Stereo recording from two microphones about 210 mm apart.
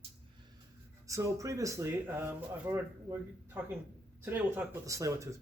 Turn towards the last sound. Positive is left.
turn(degrees=-15)  # may be behind; listen again after turning